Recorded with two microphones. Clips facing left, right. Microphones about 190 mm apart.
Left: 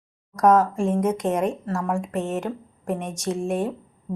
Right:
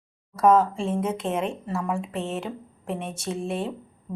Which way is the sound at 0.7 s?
45° left (ahead or behind).